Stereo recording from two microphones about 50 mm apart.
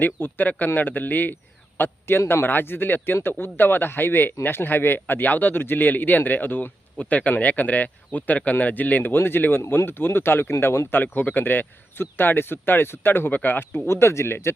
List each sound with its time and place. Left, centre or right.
0.0 s speech: left
1.8 s speech: left
11.0 s speech: left
13.8 s speech: left